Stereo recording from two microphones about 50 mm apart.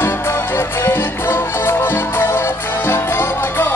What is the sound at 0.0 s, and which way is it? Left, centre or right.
Music, left.